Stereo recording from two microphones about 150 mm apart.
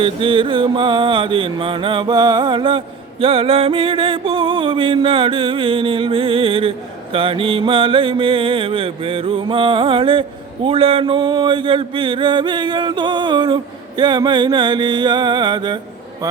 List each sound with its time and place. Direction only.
0.0 s mantra: 35° right (ahead or behind)